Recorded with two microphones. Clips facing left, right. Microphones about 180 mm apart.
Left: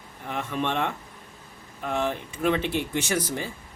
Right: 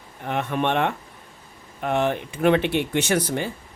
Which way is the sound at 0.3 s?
65° right (ahead or behind).